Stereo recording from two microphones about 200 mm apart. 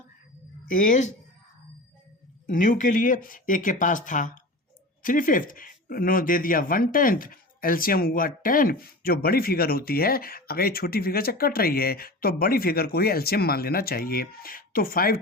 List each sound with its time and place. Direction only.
0.7 s speech: 40° left (ahead or behind)
2.5 s speech: 40° left (ahead or behind)